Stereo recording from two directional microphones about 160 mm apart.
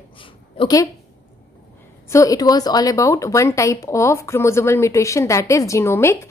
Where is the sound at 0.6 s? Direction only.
25° left (ahead or behind).